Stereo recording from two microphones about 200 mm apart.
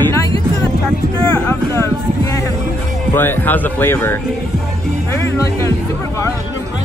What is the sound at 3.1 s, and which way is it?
Speech, 10° left (ahead or behind).